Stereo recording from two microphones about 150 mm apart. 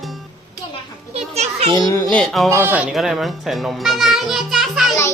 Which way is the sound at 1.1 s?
45° right (ahead or behind).